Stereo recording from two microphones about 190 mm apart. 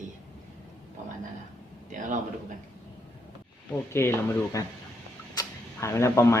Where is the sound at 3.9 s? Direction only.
15° left (ahead or behind).